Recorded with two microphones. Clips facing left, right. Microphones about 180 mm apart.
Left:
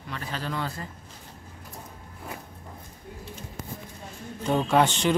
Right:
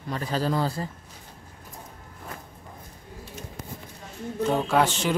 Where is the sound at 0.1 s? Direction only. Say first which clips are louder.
Right 7 dB; 35° right (ahead or behind).